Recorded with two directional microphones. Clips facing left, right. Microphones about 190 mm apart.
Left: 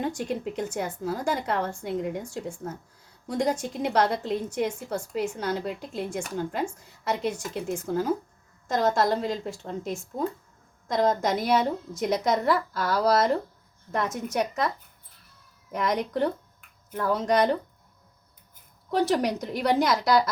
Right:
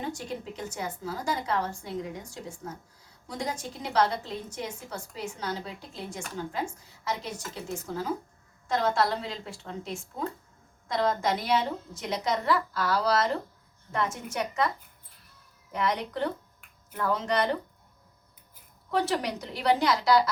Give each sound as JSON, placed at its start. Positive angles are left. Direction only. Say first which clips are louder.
{"t": 0.5, "sound": "a woman's voice", "louder": "left 5 dB", "side_deg": 55}
{"t": 15.7, "sound": "a woman's voice", "louder": "left 3 dB", "side_deg": 45}
{"t": 18.9, "sound": "a woman's voice", "louder": "left 4 dB", "side_deg": 45}